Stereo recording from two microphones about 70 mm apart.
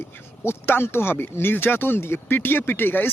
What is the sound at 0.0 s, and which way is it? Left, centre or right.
Speech, left.